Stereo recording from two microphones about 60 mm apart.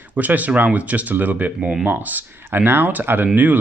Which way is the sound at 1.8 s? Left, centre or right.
Right.